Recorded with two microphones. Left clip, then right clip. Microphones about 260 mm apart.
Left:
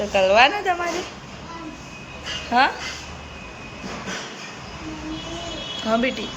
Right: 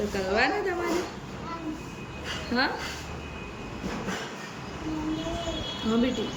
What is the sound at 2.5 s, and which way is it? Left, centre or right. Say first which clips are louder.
Speech: left 10 dB; centre.